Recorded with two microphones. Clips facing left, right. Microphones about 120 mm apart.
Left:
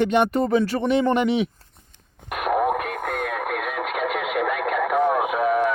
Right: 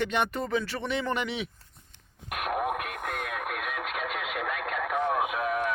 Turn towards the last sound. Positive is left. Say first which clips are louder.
# left 7 dB
turn(degrees=55)  # may be behind; listen again after turning